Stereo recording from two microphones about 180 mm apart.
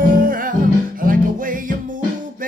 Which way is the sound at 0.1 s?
50° right (ahead or behind).